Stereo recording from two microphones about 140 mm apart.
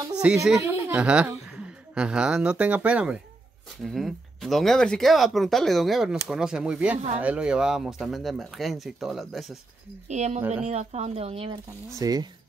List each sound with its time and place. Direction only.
0.2 s a woman's voice: 10° right (ahead or behind)
10.0 s speech: 55° right (ahead or behind)
12.0 s speech: 25° right (ahead or behind)